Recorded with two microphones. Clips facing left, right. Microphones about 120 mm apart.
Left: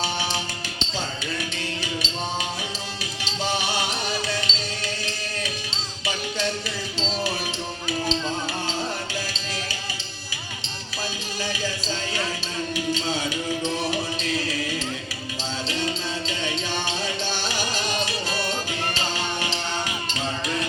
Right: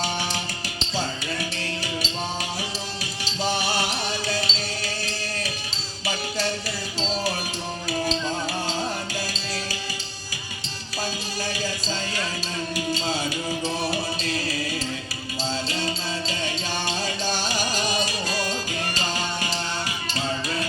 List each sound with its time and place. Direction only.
3.4 s music: 40° right (ahead or behind)